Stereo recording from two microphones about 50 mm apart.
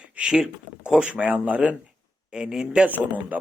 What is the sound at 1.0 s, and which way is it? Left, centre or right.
Speech, right.